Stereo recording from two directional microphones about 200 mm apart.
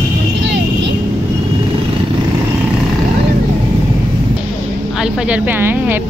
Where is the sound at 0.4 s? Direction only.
60° right (ahead or behind).